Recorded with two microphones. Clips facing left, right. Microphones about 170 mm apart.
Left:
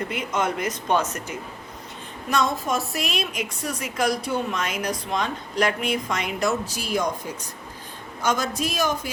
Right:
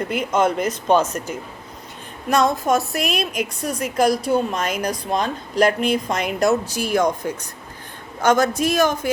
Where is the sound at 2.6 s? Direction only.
45° right (ahead or behind).